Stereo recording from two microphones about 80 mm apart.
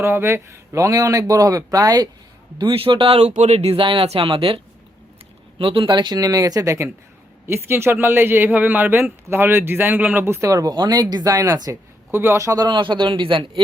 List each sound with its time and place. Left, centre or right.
0.0 s speech: right
2.6 s speech: right
5.5 s speech: right
10.5 s speech: right
12.1 s speech: right
12.5 s a man's voice: right